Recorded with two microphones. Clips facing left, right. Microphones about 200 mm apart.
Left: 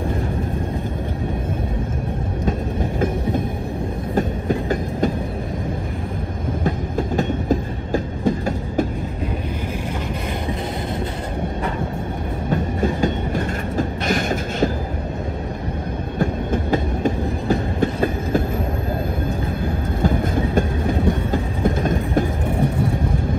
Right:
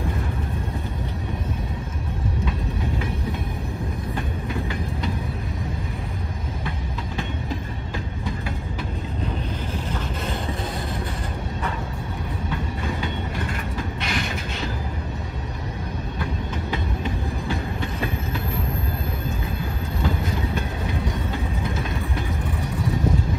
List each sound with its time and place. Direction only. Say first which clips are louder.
4.1 s train: left 11 dB; 45° left (ahead or behind)
6.6 s train: left 9 dB; 45° left (ahead or behind)
13.0 s train: left 8 dB; 45° left (ahead or behind)
16.2 s train: left 10 dB; 45° left (ahead or behind)
20.0 s train: left 6 dB; 50° left (ahead or behind)